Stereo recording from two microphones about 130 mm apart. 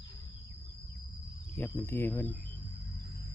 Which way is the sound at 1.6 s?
20° left (ahead or behind).